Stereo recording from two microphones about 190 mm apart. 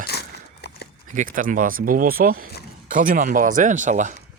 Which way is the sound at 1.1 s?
45° right (ahead or behind).